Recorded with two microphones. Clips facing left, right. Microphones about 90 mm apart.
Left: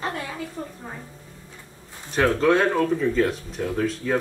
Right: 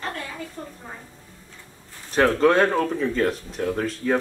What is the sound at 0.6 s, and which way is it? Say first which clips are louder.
Speech: left 3 dB; 10° left (ahead or behind).